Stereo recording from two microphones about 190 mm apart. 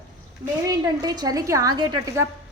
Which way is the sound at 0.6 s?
20° right (ahead or behind).